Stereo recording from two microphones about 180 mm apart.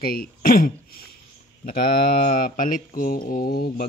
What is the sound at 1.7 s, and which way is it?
Mantra, 55° left (ahead or behind).